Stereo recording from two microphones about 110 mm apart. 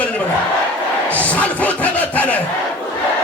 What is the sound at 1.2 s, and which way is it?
Speech, 15° left (ahead or behind).